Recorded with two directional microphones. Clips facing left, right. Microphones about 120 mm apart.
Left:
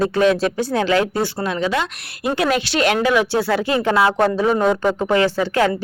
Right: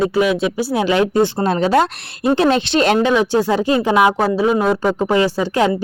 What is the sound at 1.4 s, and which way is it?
Speech, 35° right (ahead or behind).